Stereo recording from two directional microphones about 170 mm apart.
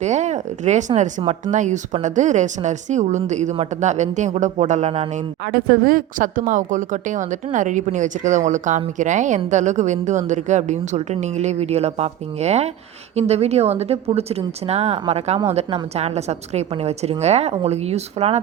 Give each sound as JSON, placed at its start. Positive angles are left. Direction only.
{"t": 0.0, "sound": "a woman's voice", "side_deg": -45}
{"t": 5.5, "sound": "a woman's voice", "side_deg": -60}